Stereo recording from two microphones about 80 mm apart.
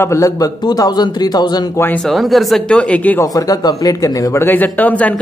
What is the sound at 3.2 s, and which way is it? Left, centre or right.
Speech, left.